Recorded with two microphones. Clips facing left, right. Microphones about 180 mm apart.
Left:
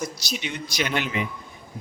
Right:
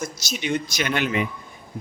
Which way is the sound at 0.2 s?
45° right (ahead or behind).